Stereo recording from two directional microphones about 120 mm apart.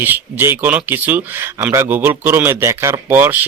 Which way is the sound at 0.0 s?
15° right (ahead or behind).